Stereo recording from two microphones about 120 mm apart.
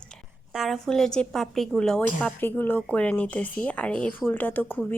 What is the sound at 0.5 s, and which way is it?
A woman's voice, centre (ahead or behind).